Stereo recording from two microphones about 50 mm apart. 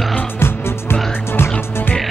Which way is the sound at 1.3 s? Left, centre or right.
Left.